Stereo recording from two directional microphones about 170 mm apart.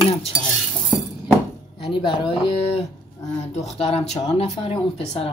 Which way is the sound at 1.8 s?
30° left (ahead or behind).